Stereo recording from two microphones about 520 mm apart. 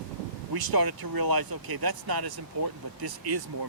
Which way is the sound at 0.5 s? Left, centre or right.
Right.